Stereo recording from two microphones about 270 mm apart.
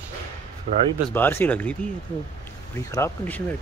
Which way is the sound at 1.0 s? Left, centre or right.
Centre.